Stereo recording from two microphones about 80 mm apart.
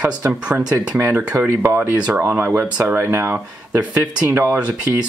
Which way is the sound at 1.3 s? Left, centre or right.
Right.